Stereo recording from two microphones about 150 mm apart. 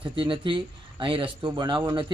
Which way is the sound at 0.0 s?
35° right (ahead or behind).